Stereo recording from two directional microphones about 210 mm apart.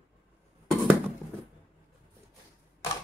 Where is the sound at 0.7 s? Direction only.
Centre (ahead or behind).